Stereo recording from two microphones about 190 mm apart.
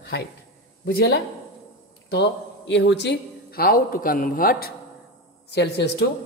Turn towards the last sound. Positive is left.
turn(degrees=60)  # may be behind; listen again after turning